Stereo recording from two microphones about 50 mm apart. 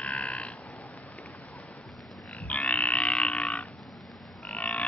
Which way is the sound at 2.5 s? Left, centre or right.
Left.